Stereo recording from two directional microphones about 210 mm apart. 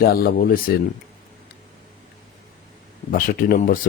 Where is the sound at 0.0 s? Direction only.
45° left (ahead or behind).